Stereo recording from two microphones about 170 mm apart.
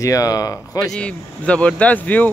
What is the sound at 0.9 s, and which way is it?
Speech, 5° left (ahead or behind).